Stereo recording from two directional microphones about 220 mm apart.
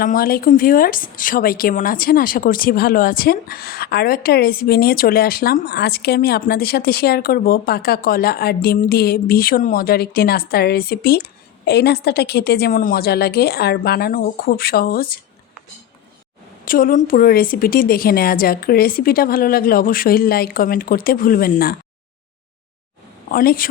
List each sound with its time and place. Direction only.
0.0 s a woman's voice: 40° left (ahead or behind)
16.6 s a woman's voice: 40° left (ahead or behind)
23.3 s a woman's voice: 40° left (ahead or behind)